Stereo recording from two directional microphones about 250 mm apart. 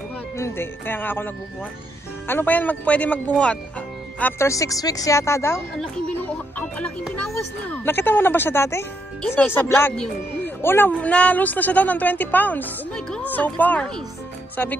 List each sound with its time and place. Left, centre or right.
0.4 s speech: centre